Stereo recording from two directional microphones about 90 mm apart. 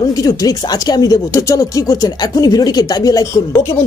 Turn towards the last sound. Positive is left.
turn(degrees=40)  # may be behind; listen again after turning